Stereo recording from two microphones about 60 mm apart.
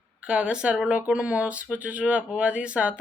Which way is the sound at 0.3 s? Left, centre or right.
Centre.